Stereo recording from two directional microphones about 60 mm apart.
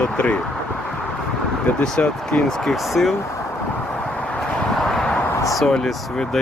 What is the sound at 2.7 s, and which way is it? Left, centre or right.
Speech, centre.